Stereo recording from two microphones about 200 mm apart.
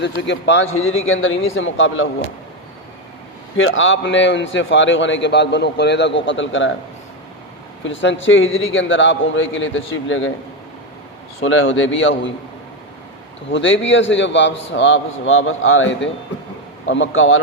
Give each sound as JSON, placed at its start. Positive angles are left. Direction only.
{"t": 0.0, "sound": "a man's voice", "side_deg": 65}
{"t": 3.6, "sound": "a man's voice", "side_deg": 75}
{"t": 7.9, "sound": "a man's voice", "side_deg": 70}
{"t": 11.4, "sound": "a man's voice", "side_deg": 70}
{"t": 13.5, "sound": "a man's voice", "side_deg": 70}